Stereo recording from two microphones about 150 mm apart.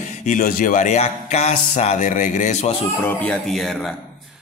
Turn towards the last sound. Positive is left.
turn(degrees=0)  # may be behind; listen again after turning